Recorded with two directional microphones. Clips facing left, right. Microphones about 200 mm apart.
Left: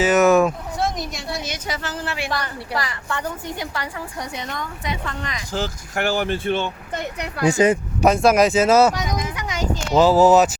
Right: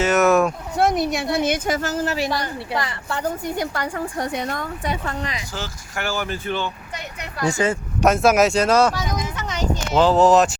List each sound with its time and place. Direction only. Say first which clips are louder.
0.0 s speech: left 2 dB; centre (ahead or behind)
0.8 s a woman's voice: right 8 dB; 60° right (ahead or behind); by 2.3 s 40° right (ahead or behind)
2.3 s a woman's voice: right 1 dB; 20° right (ahead or behind)
3.6 s a woman's voice: right 4 dB; 45° right (ahead or behind)
5.5 s speech: left 5 dB; 35° left (ahead or behind)
7.4 s speech: left 4 dB; 20° left (ahead or behind)
8.0 s speech: left 1 dB; centre (ahead or behind)